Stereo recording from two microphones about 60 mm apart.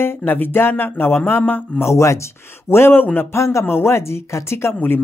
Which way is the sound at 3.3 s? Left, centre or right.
Left.